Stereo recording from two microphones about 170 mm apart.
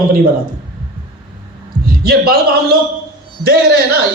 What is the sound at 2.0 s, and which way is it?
Speech, 65° right (ahead or behind).